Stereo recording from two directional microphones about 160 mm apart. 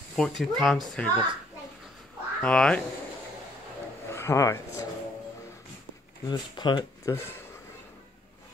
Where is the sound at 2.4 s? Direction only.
5° left (ahead or behind).